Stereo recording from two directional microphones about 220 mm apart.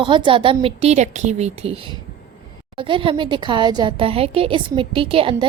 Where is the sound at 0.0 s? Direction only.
20° right (ahead or behind).